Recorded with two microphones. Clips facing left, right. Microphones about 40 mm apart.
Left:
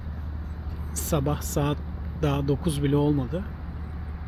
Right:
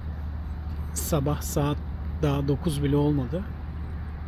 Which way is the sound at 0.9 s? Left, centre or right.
Centre.